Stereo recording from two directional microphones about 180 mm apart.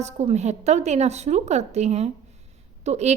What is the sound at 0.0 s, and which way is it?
A woman's voice, 40° right (ahead or behind).